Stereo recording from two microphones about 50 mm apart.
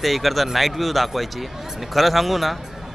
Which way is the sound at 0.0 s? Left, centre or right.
Centre.